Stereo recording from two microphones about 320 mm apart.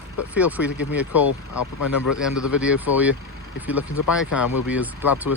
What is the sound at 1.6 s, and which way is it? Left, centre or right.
Speech, left.